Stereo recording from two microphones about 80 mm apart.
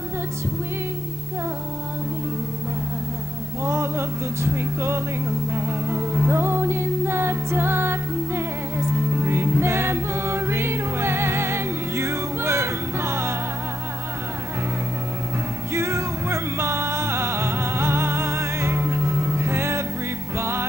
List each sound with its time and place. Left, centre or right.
3.6 s music: right
15.7 s music: right